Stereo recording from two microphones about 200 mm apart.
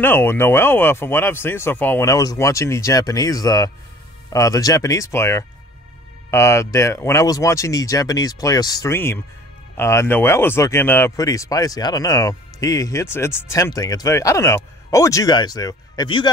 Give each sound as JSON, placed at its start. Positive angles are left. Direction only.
{"t": 0.0, "sound": "speech", "side_deg": 10}